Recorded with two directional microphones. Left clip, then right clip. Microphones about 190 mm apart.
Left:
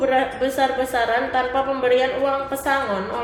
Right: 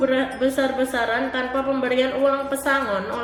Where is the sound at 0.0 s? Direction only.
30° right (ahead or behind).